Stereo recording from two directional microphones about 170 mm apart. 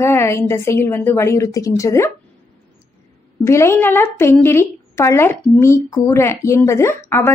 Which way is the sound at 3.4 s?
15° left (ahead or behind).